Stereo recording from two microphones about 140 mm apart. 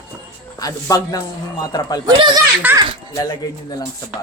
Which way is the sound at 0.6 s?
25° left (ahead or behind).